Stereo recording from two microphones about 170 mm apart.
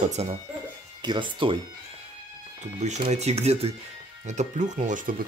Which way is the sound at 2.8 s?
45° right (ahead or behind).